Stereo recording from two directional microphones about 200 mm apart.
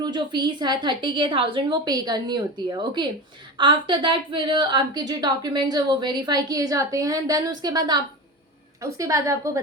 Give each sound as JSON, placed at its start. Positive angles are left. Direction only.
{"t": 0.0, "sound": "a woman's voice", "side_deg": -20}